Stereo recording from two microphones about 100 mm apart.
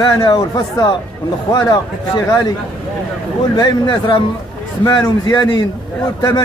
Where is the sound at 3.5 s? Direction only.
50° left (ahead or behind).